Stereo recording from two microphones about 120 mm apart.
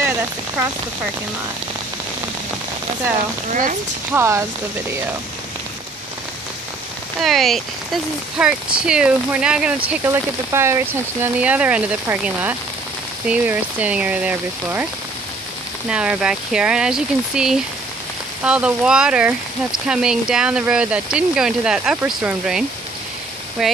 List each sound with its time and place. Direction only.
4.1 s speech: 20° right (ahead or behind)
7.2 s speech: centre (ahead or behind)
10.0 s speech: 25° right (ahead or behind)
15.9 s speech: 10° right (ahead or behind)